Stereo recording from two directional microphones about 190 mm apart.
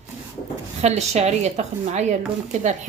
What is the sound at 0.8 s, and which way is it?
Speech, 35° right (ahead or behind).